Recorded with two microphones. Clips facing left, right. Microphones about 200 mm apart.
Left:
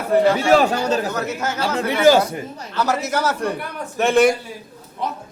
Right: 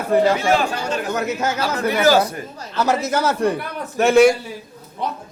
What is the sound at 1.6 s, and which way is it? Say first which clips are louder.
Speech: left 3 dB; 25° left (ahead or behind).